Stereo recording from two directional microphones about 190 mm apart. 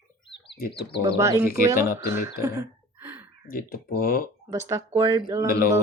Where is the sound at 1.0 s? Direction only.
15° right (ahead or behind).